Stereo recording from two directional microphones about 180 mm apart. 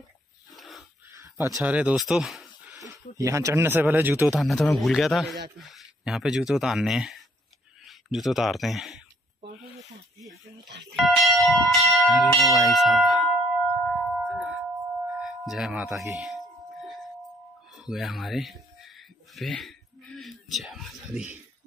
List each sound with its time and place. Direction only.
0.6 s wheeze: centre (ahead or behind)
1.6 s speech: 5° right (ahead or behind)
2.7 s speech: 15° right (ahead or behind)
4.4 s speech: centre (ahead or behind)
10.7 s speech: 75° right (ahead or behind)
11.0 s speech: centre (ahead or behind)
13.8 s singing bowl: centre (ahead or behind)
15.0 s music: centre (ahead or behind)
17.7 s a sound: centre (ahead or behind)